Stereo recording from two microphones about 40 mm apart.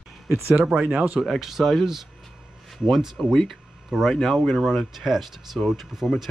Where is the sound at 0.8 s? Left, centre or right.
Right.